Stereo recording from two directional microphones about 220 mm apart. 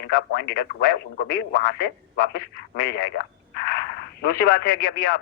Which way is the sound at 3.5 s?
45° left (ahead or behind).